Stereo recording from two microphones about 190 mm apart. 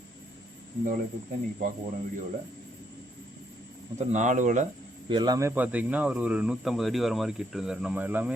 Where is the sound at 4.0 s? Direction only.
40° right (ahead or behind).